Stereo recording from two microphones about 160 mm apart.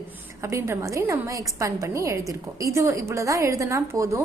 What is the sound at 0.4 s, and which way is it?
A woman's voice, 20° right (ahead or behind).